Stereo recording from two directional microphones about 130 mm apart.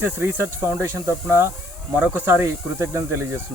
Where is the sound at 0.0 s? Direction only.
15° right (ahead or behind).